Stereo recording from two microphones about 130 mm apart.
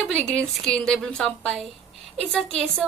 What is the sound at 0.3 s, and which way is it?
A woman's voice, 10° left (ahead or behind).